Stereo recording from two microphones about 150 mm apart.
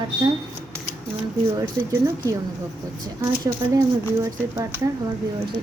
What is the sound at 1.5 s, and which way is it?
Speech, 20° right (ahead or behind).